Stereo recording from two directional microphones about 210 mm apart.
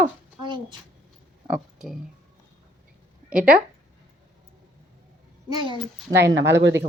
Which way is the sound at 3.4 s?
5° right (ahead or behind).